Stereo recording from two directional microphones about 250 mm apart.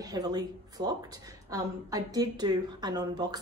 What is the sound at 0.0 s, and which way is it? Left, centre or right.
A woman's voice, centre.